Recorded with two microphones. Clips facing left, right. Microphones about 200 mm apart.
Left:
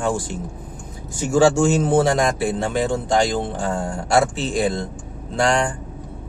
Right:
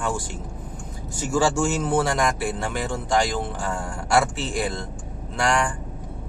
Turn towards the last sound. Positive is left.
turn(degrees=25)  # may be behind; listen again after turning